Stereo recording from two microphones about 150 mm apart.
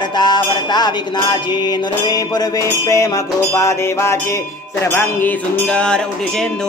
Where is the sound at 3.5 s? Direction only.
20° left (ahead or behind).